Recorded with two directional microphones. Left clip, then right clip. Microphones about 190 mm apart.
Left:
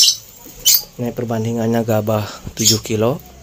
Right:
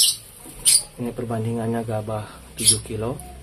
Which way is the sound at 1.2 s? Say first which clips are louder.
Left 6 dB; 45° left (ahead or behind).